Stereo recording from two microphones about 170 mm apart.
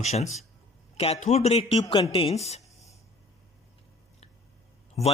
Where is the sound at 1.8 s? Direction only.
25° left (ahead or behind).